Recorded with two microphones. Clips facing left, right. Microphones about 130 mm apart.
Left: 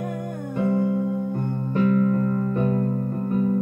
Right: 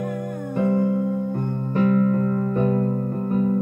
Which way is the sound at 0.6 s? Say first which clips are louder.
Right 2 dB; 35° right (ahead or behind).